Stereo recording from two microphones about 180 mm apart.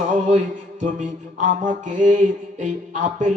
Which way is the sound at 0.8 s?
45° right (ahead or behind).